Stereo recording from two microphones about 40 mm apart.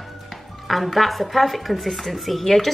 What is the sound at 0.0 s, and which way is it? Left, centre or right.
Music, centre.